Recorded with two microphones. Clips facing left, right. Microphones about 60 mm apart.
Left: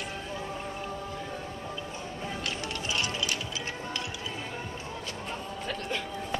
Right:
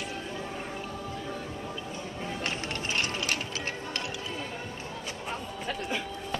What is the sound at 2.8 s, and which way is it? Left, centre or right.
Music, right.